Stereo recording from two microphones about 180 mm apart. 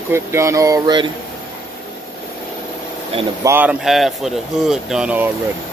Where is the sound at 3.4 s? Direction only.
10° right (ahead or behind).